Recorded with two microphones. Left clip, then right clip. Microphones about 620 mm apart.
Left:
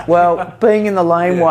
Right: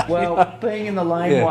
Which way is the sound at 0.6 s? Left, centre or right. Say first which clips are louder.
Left 10 dB; left.